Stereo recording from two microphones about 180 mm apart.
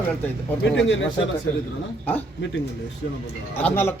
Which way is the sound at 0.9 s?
90° left.